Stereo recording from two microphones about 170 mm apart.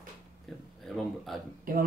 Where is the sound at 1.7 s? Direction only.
55° right (ahead or behind).